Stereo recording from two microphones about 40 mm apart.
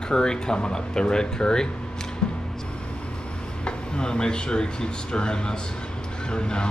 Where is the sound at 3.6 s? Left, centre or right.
Left.